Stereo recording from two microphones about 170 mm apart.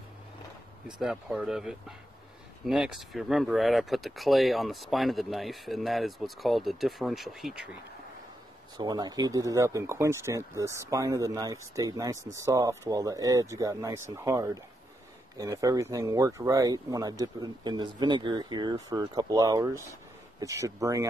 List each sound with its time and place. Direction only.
0.8 s speech: 5° right (ahead or behind)
8.7 s speech: 25° right (ahead or behind)